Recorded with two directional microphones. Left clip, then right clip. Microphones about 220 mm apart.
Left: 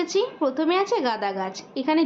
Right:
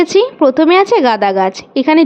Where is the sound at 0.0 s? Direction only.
35° right (ahead or behind).